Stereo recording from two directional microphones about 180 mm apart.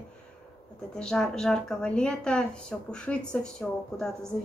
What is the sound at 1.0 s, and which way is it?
Speech, 5° left (ahead or behind).